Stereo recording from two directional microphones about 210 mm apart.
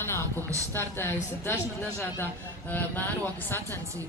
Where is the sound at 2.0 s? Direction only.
10° left (ahead or behind).